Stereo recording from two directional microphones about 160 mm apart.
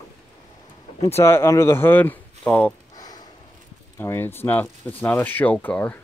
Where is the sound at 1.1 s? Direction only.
15° left (ahead or behind).